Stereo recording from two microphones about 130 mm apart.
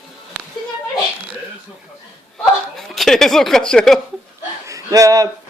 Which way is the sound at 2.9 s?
Centre (ahead or behind).